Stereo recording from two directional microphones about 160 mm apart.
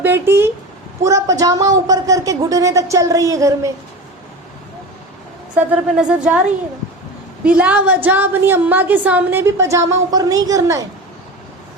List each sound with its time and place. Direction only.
0.0 s a woman's voice: 15° right (ahead or behind)
5.5 s a woman's voice: 5° right (ahead or behind)
7.4 s a woman's voice: 10° right (ahead or behind)